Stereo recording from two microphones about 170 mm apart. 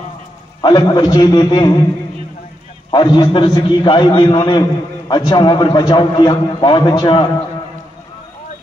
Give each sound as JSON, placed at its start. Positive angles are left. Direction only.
{"t": 0.6, "sound": "a man's voice", "side_deg": 25}
{"t": 2.9, "sound": "a man's voice", "side_deg": 25}